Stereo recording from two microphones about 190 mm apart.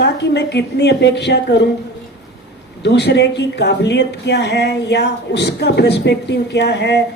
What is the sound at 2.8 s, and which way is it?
Speech, 60° left (ahead or behind).